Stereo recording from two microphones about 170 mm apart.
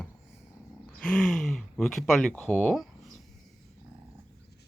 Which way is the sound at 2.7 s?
Centre (ahead or behind).